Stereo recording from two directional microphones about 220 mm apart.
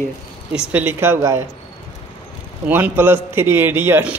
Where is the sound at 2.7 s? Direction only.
10° right (ahead or behind).